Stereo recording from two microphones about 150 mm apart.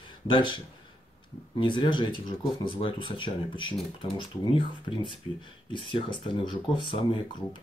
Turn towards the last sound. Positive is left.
turn(degrees=30)  # may be behind; listen again after turning